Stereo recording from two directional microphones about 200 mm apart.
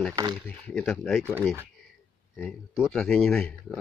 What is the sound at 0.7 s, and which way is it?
Speech, centre (ahead or behind).